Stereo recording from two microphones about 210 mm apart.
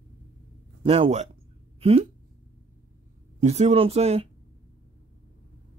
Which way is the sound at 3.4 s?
30° right (ahead or behind).